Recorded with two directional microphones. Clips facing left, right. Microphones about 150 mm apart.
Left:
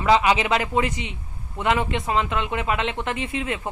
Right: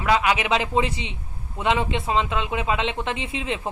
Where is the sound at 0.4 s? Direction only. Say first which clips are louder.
Even; 20° right (ahead or behind).